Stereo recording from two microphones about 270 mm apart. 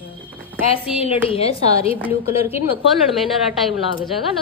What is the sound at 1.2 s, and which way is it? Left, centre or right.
Speech, left.